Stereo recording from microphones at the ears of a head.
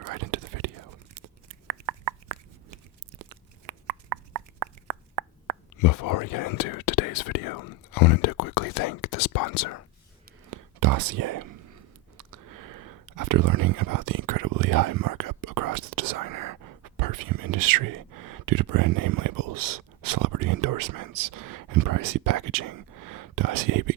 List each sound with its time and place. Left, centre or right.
0.0 s whispering: right
3.2 s plop: right
5.7 s speech: left
10.4 s whispering: right